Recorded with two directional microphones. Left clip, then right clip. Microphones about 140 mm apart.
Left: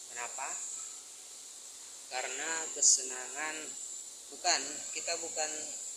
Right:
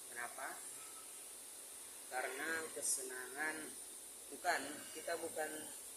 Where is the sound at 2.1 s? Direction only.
15° right (ahead or behind).